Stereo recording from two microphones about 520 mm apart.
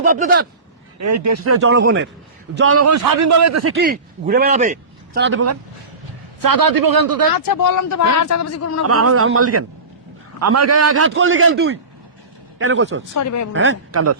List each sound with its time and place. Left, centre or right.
0.0 s speech: centre
0.9 s a man's voice: right
6.4 s a man's voice: right
7.3 s speech: left
8.9 s a man's voice: right
13.1 s speech: left
13.5 s a man's voice: right